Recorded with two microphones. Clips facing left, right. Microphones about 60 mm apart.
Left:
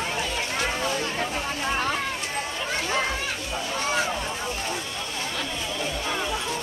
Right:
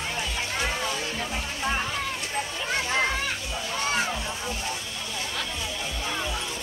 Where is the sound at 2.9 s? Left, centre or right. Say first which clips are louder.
Right 1 dB; centre.